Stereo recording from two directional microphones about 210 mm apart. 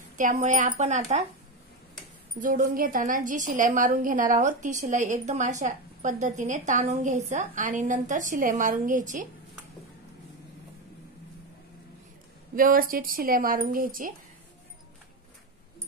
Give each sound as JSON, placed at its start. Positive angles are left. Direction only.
{"t": 0.2, "sound": "a woman's voice", "side_deg": -35}
{"t": 2.4, "sound": "a woman's voice", "side_deg": -40}
{"t": 12.5, "sound": "speech", "side_deg": -40}